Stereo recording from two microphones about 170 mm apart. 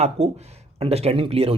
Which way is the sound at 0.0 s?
40° right (ahead or behind).